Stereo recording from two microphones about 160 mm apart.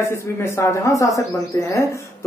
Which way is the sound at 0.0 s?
15° left (ahead or behind).